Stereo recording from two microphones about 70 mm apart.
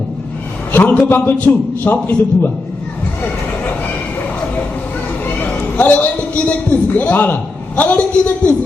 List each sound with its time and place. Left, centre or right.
0.7 s a man's voice: left
5.4 s a man's voice: left